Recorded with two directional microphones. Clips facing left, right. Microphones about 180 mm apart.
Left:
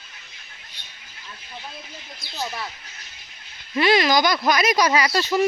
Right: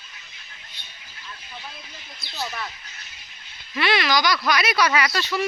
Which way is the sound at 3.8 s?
40° left (ahead or behind).